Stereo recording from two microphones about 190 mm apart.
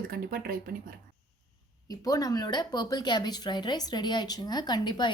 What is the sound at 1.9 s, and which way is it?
Speech, 20° left (ahead or behind).